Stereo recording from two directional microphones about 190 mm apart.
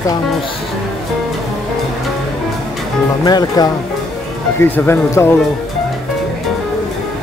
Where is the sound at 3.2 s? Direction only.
20° left (ahead or behind).